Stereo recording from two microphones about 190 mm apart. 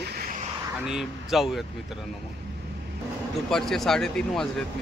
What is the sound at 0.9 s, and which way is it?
Speech, centre (ahead or behind).